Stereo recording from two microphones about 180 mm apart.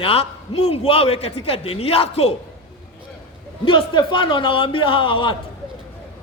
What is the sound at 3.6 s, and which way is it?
A man's voice, 30° left (ahead or behind).